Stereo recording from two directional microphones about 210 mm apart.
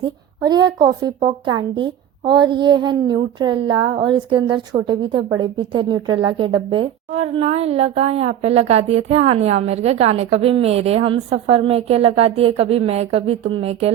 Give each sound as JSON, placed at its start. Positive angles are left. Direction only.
{"t": 0.0, "sound": "a woman's voice", "side_deg": -20}